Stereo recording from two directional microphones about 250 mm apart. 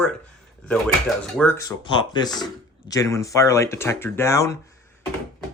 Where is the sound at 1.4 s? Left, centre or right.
Centre.